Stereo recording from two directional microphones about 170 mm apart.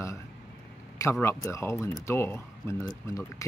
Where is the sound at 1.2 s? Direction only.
15° left (ahead or behind).